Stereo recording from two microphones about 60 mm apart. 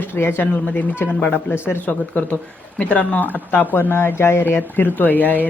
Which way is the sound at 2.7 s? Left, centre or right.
Left.